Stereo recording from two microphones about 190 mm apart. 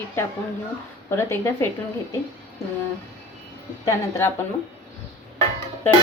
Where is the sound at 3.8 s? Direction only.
15° left (ahead or behind).